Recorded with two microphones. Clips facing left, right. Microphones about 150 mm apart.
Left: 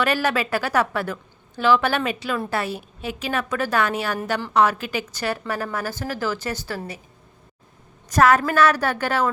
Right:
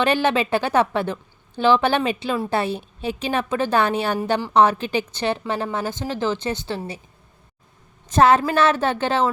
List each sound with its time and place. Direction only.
0.0 s a woman's voice: 25° right (ahead or behind)
8.1 s a woman's voice: 25° right (ahead or behind)